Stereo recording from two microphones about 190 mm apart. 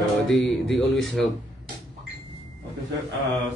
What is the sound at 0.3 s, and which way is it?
A man's voice, centre (ahead or behind).